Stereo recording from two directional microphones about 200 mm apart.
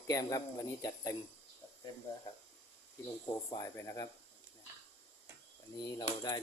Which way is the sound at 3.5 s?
15° left (ahead or behind).